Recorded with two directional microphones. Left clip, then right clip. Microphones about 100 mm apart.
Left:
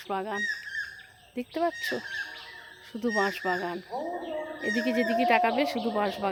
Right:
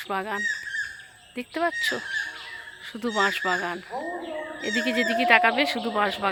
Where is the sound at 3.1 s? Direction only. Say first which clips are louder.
Right 5 dB; 15° left (ahead or behind).